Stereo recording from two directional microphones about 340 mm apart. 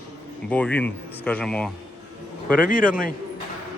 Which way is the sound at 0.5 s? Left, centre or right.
Centre.